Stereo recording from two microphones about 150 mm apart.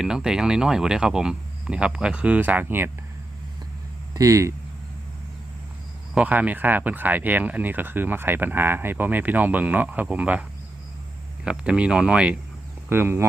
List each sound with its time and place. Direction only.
0.0 s speech: 5° right (ahead or behind)
4.1 s speech: 20° right (ahead or behind)
6.1 s speech: 10° right (ahead or behind)
11.4 s speech: 5° right (ahead or behind)